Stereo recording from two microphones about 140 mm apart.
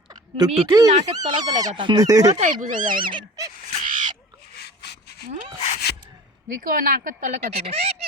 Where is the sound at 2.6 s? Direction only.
70° right (ahead or behind).